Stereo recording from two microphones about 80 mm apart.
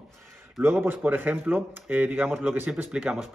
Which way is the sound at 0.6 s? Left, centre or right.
Right.